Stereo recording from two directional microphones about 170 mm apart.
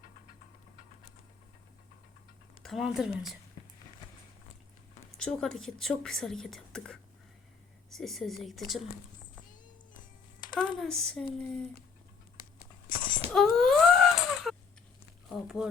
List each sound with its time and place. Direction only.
2.6 s a woman's voice: centre (ahead or behind)
5.1 s a woman's voice: 5° left (ahead or behind)
10.6 s a woman's voice: 5° left (ahead or behind)
12.9 s a sound: 30° left (ahead or behind)
13.3 s wail: centre (ahead or behind)
15.3 s a woman's voice: centre (ahead or behind)